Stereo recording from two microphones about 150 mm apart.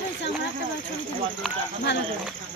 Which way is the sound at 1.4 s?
Centre (ahead or behind).